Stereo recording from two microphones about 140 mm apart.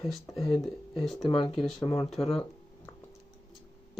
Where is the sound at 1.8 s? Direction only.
25° left (ahead or behind).